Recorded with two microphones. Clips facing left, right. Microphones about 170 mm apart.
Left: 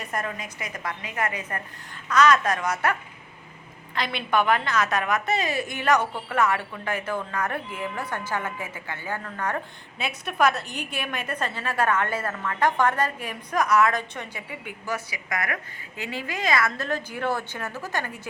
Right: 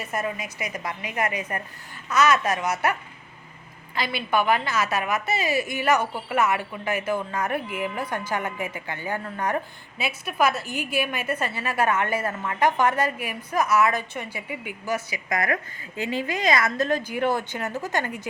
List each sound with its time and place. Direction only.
0.0 s a woman's voice: 5° right (ahead or behind)
3.9 s a woman's voice: 5° right (ahead or behind)
10.0 s a woman's voice: 5° right (ahead or behind)
14.9 s a woman's voice: 25° right (ahead or behind)